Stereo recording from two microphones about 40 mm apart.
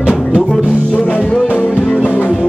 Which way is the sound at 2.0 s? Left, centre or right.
Left.